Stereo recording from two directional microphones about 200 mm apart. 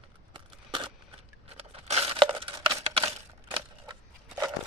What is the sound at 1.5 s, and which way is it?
Crumpling, 30° right (ahead or behind).